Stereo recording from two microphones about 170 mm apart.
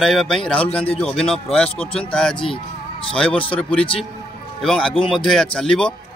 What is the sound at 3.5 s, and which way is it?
A man's voice, 5° left (ahead or behind).